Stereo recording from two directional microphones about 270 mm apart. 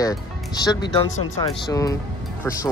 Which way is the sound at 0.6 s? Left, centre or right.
Centre.